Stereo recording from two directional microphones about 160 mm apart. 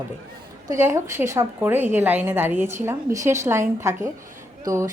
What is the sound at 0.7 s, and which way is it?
A woman's voice, 15° right (ahead or behind).